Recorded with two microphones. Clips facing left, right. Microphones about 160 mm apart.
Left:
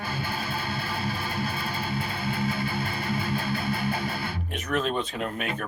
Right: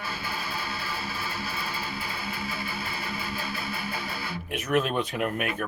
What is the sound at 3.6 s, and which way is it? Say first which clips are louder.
Music: left 6 dB; 55° left (ahead or behind).